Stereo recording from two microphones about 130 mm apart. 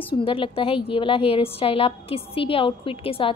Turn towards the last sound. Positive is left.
turn(degrees=45)  # may be behind; listen again after turning